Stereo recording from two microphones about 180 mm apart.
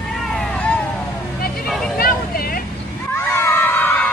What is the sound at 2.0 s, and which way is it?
Vehicle, 55° left (ahead or behind).